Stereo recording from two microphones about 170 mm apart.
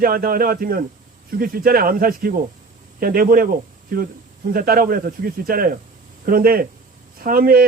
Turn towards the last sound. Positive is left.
turn(degrees=-60)  # may be behind; listen again after turning